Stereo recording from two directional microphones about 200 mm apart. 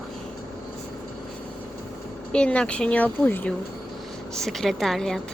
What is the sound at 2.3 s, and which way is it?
A woman's voice, 5° left (ahead or behind).